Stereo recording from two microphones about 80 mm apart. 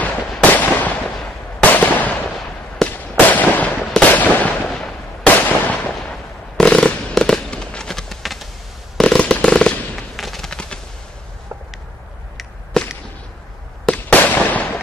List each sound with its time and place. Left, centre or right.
0.0 s fireworks: centre
4.6 s a sound: centre
5.2 s a sound: centre
6.5 s fireworks: centre
12.7 s whip: centre
13.9 s fireworks: left